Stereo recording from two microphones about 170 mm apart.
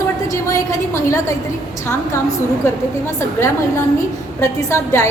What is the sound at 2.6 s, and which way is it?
Speech, 15° left (ahead or behind).